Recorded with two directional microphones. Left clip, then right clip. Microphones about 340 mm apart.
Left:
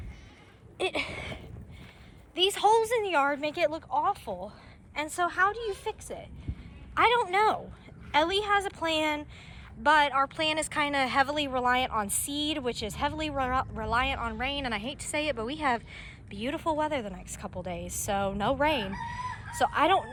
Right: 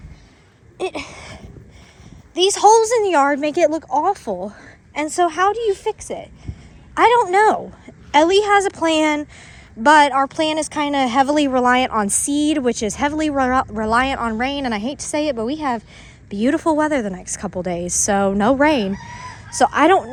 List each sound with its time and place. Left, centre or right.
0.8 s a sound: centre
2.3 s speech: centre
12.3 s speech: right
13.1 s speech: right